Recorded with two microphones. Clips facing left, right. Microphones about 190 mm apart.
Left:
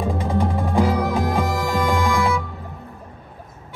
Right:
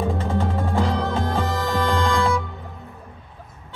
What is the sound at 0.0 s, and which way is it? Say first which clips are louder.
Music: left 1 dB; 15° left (ahead or behind).